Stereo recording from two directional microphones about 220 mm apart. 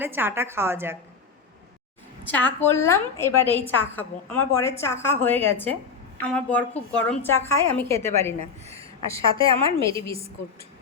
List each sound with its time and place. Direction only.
0.0 s a woman's voice: 10° right (ahead or behind)
2.2 s a woman's voice: 10° left (ahead or behind)
8.4 s a woman's voice: 30° right (ahead or behind)